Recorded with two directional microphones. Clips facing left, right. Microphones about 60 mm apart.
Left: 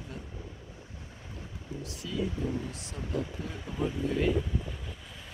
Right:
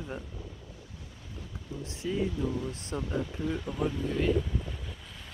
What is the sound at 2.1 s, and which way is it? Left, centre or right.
Speech, right.